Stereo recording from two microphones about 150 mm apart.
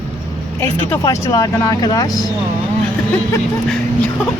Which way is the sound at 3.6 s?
5° left (ahead or behind).